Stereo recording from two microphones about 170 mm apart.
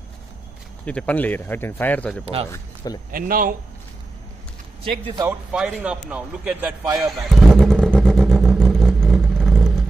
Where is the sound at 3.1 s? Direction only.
55° right (ahead or behind).